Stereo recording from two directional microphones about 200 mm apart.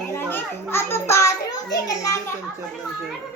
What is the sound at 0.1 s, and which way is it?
Children playing, 10° left (ahead or behind).